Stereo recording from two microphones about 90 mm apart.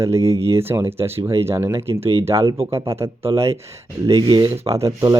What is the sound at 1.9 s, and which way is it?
Speech, 90° right.